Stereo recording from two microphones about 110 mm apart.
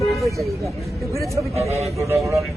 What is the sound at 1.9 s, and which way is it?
Speech, 25° right (ahead or behind).